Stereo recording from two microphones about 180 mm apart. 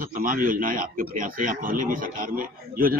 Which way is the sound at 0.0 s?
50° right (ahead or behind).